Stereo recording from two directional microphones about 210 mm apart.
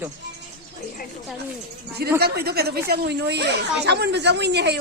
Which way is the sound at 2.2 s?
50° right (ahead or behind).